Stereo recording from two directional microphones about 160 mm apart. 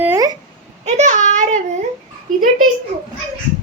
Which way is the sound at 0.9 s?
45° right (ahead or behind).